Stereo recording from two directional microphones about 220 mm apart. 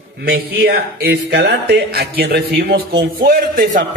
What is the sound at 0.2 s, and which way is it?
A man's voice, 45° right (ahead or behind).